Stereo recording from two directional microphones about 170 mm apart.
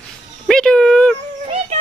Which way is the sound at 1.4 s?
35° right (ahead or behind).